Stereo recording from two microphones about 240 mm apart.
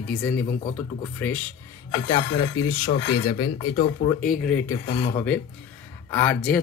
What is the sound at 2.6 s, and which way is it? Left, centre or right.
Speech, centre.